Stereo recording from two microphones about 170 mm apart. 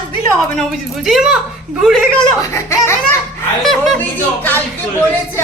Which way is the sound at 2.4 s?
15° left (ahead or behind).